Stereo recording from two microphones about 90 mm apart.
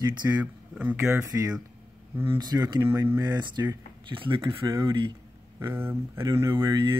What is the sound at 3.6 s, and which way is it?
Speech, 40° right (ahead or behind).